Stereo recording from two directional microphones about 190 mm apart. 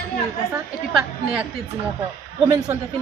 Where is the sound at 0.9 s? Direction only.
5° right (ahead or behind).